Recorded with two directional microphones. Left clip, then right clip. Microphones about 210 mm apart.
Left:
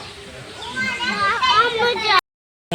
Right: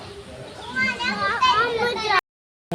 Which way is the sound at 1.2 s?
35° left (ahead or behind).